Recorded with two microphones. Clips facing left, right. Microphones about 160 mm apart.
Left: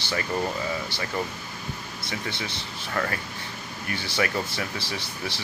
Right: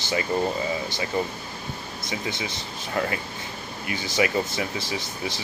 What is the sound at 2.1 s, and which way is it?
Speech, 20° right (ahead or behind).